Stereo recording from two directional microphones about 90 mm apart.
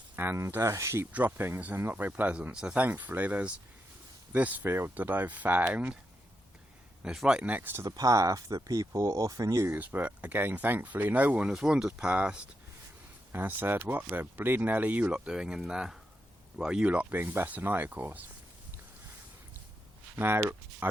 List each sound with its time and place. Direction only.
0.2 s speech: 30° right (ahead or behind)
1.1 s speech: 20° right (ahead or behind)
7.0 s speech: 5° right (ahead or behind)
7.9 s speech: 40° right (ahead or behind)
9.7 s speech: 20° right (ahead or behind)
20.1 s speech: 25° right (ahead or behind)